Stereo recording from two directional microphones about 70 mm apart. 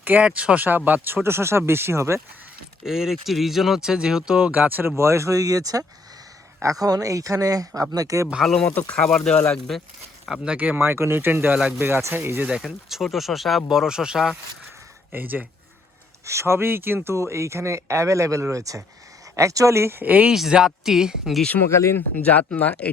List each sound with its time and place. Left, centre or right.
0.0 s speech: right
2.8 s speech: centre; by 8.3 s right
9.0 s speech: centre
10.4 s speech: centre
12.6 s speech: centre
15.1 s speech: right
16.2 s speech: right
20.1 s speech: right
20.3 s speech: centre
21.7 s speech: left
22.2 s speech: left